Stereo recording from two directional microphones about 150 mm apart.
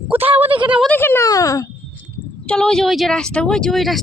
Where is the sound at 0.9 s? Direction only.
15° left (ahead or behind).